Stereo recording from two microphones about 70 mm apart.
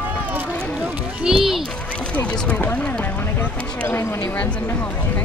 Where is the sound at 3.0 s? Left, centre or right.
Left.